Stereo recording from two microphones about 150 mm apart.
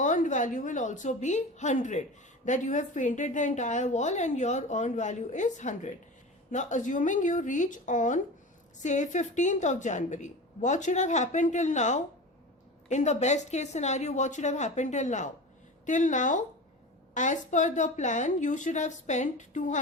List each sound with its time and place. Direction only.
0.0 s a woman's voice: 55° left (ahead or behind)